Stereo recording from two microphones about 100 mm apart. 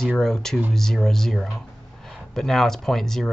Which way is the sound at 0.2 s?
5° left (ahead or behind).